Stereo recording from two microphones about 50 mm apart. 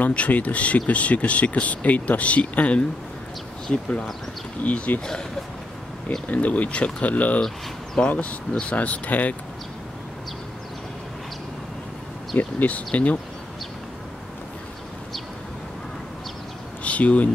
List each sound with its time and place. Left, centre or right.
0.0 s speech: left
4.6 s speech: left
6.2 s speech: left
12.4 s speech: left
16.8 s a sound: left